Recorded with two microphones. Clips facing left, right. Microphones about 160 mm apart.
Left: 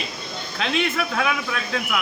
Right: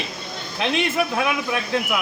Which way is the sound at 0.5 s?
15° right (ahead or behind).